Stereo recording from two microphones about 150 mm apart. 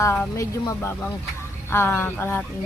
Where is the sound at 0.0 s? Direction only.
20° left (ahead or behind).